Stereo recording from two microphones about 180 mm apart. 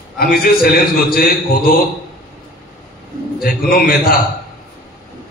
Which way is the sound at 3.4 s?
55° left (ahead or behind).